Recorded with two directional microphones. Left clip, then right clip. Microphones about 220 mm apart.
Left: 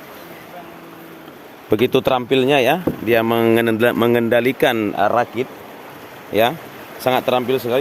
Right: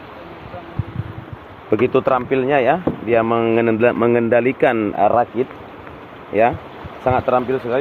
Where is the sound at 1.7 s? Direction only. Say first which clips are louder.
Even; 55° left (ahead or behind).